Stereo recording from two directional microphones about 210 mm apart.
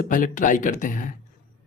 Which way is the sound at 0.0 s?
40° left (ahead or behind).